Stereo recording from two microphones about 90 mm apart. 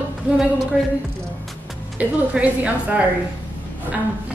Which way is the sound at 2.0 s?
15° right (ahead or behind).